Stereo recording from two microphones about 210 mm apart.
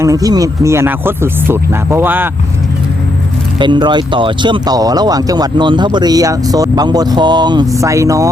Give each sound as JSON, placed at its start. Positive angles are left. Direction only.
{"t": 0.0, "sound": "speech", "side_deg": -15}
{"t": 3.6, "sound": "speech", "side_deg": -20}